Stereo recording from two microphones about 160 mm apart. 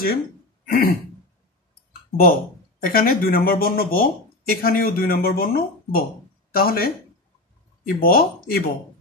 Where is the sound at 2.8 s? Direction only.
65° left (ahead or behind).